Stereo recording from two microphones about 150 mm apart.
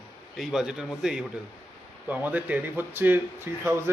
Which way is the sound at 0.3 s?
5° right (ahead or behind).